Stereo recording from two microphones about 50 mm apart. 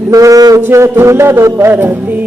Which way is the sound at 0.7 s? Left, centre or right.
Right.